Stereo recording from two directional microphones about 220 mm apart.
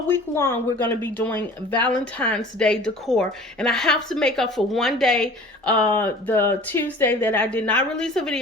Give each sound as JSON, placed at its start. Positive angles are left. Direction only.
{"t": 0.1, "sound": "a woman's voice", "side_deg": 10}